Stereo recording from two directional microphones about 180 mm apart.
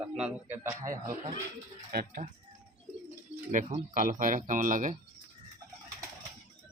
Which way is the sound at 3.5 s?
45° right (ahead or behind).